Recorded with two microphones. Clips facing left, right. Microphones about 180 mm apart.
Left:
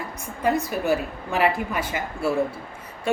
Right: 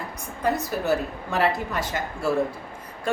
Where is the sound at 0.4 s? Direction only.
10° left (ahead or behind).